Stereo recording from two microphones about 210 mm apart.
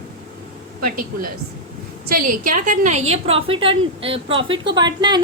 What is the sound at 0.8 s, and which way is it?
A woman's voice, 40° right (ahead or behind).